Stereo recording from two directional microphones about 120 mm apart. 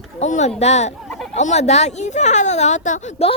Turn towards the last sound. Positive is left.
turn(degrees=85)